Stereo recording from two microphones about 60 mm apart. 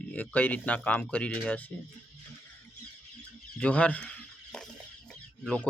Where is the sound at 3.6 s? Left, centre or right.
Left.